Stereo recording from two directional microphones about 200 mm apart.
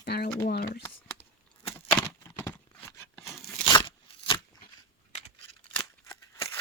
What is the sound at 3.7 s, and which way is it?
Crunch, 25° left (ahead or behind).